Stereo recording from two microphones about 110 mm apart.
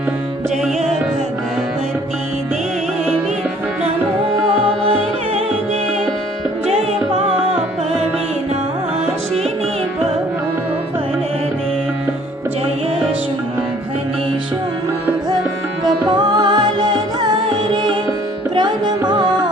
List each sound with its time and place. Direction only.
16.0 s music: 40° right (ahead or behind)
18.5 s music: 40° right (ahead or behind)